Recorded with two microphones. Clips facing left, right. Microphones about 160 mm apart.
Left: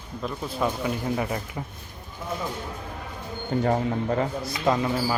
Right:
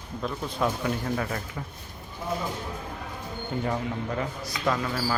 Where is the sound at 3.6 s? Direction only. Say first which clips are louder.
Left 6 dB; 45° left (ahead or behind).